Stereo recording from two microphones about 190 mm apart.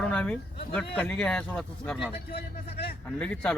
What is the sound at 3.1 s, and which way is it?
Speech, 5° left (ahead or behind).